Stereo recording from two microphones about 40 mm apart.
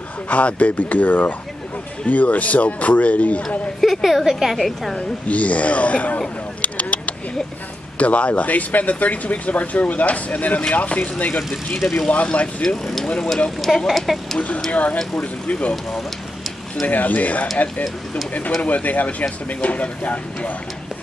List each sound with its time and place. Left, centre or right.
0.3 s speech: left
3.8 s speech: centre
5.3 s speech: left
6.6 s a sound: left
8.0 s speech: left
11.8 s speech: centre
12.1 s speech: left
12.6 s speech: centre
14.7 s speech: left
16.8 s speech: left